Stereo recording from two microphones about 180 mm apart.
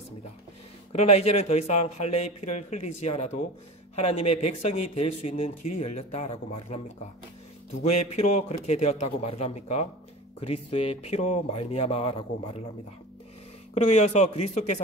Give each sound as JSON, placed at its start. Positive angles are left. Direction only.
{"t": 0.9, "sound": "speech", "side_deg": 35}
{"t": 8.1, "sound": "speech", "side_deg": 40}
{"t": 13.7, "sound": "speech", "side_deg": 35}